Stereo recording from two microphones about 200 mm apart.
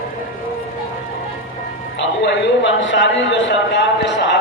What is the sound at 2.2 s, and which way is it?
A man's voice, 65° left (ahead or behind).